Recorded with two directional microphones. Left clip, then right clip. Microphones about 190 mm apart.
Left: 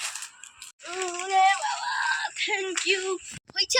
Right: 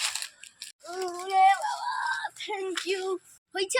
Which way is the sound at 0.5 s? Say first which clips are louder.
Left 2 dB; 5° right (ahead or behind).